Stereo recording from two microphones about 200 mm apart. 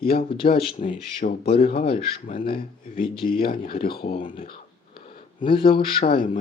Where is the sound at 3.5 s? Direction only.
45° left (ahead or behind).